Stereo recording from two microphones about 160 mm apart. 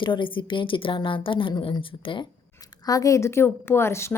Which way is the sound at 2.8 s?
20° left (ahead or behind).